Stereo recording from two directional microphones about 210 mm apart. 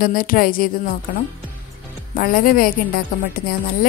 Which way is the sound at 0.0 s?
45° left (ahead or behind).